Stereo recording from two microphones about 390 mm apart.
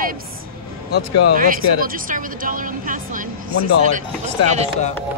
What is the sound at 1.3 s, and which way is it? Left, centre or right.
A woman's voice, right.